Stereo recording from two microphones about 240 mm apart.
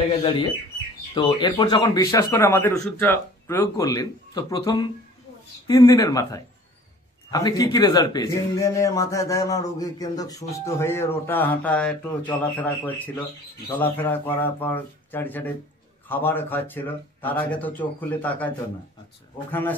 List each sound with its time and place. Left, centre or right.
0.2 s a man's voice: left